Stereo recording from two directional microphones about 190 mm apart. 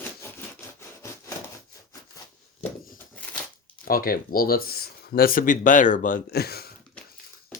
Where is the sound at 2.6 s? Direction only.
45° left (ahead or behind).